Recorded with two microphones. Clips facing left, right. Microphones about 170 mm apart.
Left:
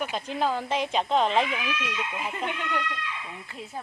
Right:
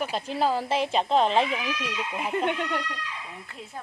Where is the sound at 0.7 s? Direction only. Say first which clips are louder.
Right 2 dB; centre (ahead or behind).